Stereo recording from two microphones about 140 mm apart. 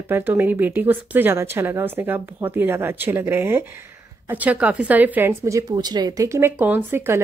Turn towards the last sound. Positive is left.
turn(degrees=-15)  # may be behind; listen again after turning